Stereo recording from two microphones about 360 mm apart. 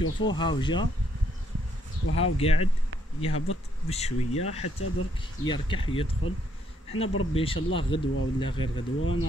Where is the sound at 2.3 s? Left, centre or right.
Centre.